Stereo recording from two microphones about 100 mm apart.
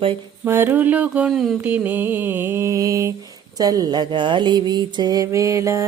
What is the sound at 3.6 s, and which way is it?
Music, 40° right (ahead or behind).